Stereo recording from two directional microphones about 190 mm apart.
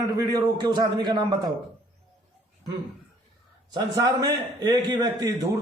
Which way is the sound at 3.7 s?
20° right (ahead or behind).